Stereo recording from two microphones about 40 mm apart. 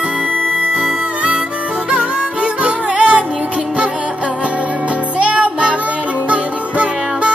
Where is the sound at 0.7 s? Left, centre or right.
Right.